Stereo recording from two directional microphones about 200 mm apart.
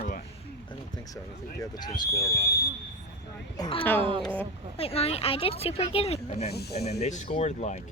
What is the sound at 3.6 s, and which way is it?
Speech, 25° left (ahead or behind).